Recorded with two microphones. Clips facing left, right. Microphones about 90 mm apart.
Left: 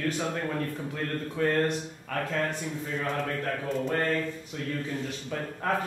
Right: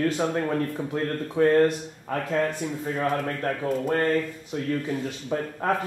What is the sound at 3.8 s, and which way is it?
Speech, 35° right (ahead or behind).